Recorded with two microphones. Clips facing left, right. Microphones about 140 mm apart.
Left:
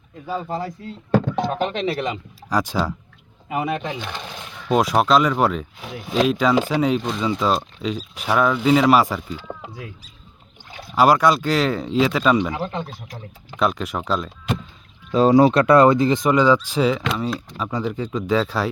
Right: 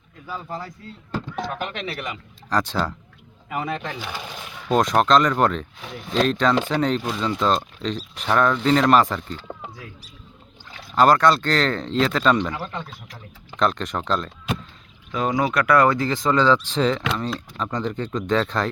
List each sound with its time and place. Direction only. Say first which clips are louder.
0.3 s speech: left 6 dB; 30° left (ahead or behind)
1.1 s bleat: left 11 dB; 65° left (ahead or behind)
1.4 s speech: left 6 dB; 25° left (ahead or behind)
2.5 s speech: left 2 dB; 10° left (ahead or behind)
4.0 s speech: left 1 dB; 5° right (ahead or behind)
10.9 s speech: left 1 dB; 10° left (ahead or behind)
15.1 s speech: left 8 dB; 30° left (ahead or behind); by 18.7 s 5° left (ahead or behind)